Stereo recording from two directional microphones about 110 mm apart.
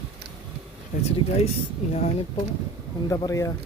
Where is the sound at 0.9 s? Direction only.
90° left.